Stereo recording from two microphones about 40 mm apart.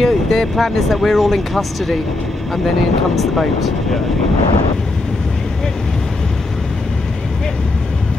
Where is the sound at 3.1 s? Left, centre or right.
Centre.